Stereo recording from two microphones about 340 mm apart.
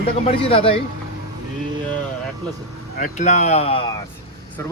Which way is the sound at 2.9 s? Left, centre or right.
Left.